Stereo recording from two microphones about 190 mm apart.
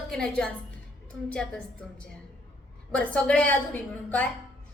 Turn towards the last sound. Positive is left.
turn(degrees=10)  # may be behind; listen again after turning